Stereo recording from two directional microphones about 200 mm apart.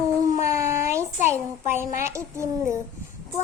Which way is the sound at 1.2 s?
35° left (ahead or behind).